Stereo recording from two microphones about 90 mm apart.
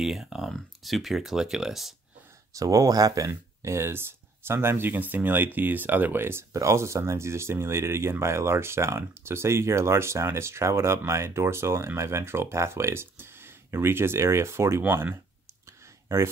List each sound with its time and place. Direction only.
0.0 s speech: 5° right (ahead or behind)
2.5 s speech: 40° right (ahead or behind)
3.3 s speech: 30° right (ahead or behind)